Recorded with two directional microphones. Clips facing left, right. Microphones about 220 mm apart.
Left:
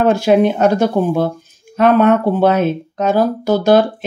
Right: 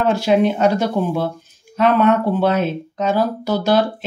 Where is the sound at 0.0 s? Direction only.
50° left (ahead or behind).